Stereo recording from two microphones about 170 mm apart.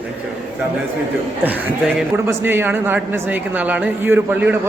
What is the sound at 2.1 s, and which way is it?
A man's voice, 15° right (ahead or behind).